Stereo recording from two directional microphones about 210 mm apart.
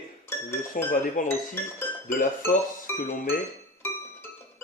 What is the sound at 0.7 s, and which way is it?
Speech, 40° left (ahead or behind).